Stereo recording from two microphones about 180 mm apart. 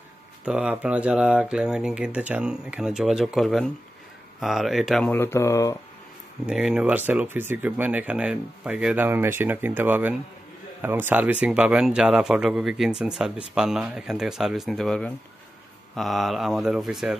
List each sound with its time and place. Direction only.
0.5 s speech: 5° right (ahead or behind)
5.1 s speech: 15° left (ahead or behind)
6.4 s speech: 5° right (ahead or behind)